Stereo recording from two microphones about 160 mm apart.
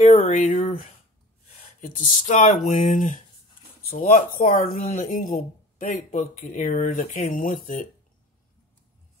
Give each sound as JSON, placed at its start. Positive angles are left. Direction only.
{"t": 0.1, "sound": "speech", "side_deg": 45}
{"t": 1.8, "sound": "speech", "side_deg": 55}